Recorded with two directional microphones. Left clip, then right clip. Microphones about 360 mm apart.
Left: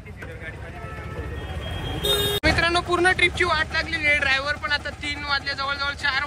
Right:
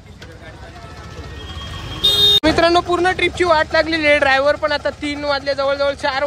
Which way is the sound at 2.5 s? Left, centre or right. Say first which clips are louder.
Right 7 dB; centre.